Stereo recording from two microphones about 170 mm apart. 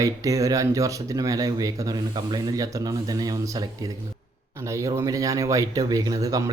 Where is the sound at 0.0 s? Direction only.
20° right (ahead or behind).